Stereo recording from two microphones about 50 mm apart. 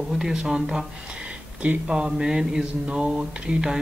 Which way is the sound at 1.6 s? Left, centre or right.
Right.